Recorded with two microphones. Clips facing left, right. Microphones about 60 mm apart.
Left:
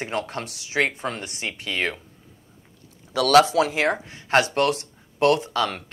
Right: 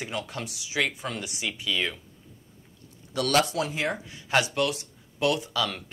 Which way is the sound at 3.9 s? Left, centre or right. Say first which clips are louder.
Left 5 dB; left.